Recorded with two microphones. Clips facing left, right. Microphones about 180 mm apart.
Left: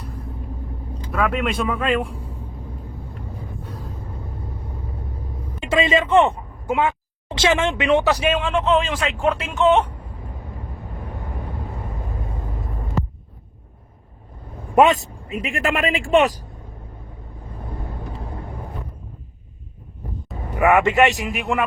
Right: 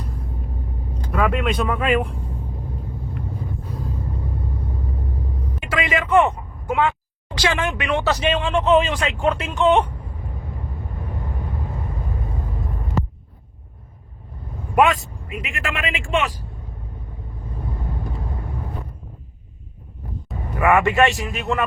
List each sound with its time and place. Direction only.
0.0 s rumble: centre (ahead or behind)
1.1 s speech: centre (ahead or behind)
5.5 s speech: 25° left (ahead or behind); by 9.8 s centre (ahead or behind)
14.8 s speech: 25° left (ahead or behind); by 16.5 s 40° left (ahead or behind)
20.6 s speech: 20° left (ahead or behind)